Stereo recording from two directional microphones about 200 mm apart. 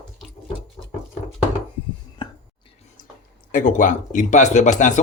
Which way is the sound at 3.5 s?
40° left (ahead or behind).